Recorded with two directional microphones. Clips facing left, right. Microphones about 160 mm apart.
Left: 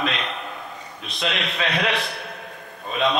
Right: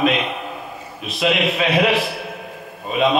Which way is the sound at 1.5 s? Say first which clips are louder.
Right 7 dB; 5° right (ahead or behind).